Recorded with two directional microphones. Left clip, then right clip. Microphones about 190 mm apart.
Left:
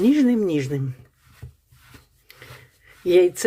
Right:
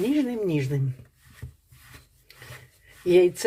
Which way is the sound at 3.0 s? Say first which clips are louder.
Left 2 dB; 15° left (ahead or behind).